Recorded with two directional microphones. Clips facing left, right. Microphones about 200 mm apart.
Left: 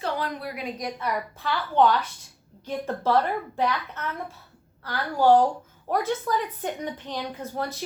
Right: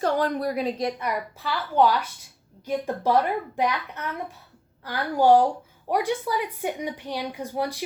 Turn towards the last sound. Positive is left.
turn(degrees=-15)  # may be behind; listen again after turning